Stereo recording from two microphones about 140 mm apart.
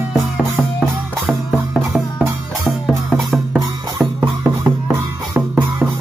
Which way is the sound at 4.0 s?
20° right (ahead or behind).